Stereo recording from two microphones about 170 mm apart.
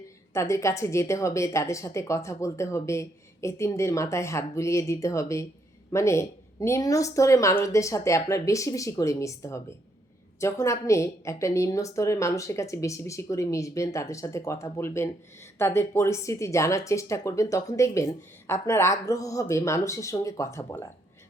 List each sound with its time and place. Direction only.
0.3 s speech: 15° left (ahead or behind)